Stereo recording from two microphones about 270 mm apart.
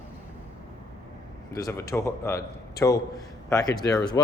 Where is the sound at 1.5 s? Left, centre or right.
Centre.